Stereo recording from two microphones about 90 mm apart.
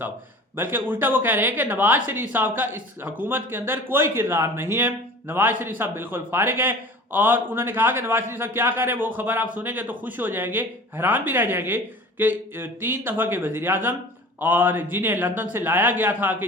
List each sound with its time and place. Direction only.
0.5 s a man's voice: 25° right (ahead or behind)